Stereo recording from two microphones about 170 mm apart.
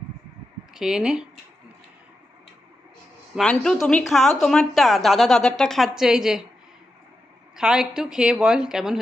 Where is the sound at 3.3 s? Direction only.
5° left (ahead or behind).